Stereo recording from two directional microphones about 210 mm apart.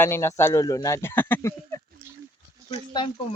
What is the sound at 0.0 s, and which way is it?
Speech, 10° left (ahead or behind).